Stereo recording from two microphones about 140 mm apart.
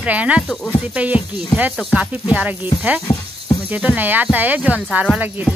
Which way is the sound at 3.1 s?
45° left (ahead or behind).